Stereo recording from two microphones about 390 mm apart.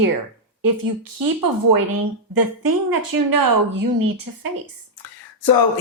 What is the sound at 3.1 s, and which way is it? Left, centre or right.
Speech, right.